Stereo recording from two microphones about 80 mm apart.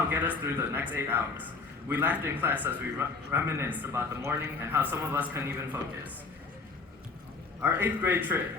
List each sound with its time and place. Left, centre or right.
0.1 s a man's voice: right
7.6 s a man's voice: right